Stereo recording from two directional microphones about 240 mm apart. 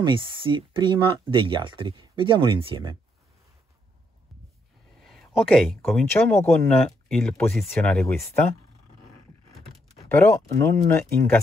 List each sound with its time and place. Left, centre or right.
0.0 s speech: right
5.0 s a sound: centre
5.9 s speech: centre
10.0 s speech: centre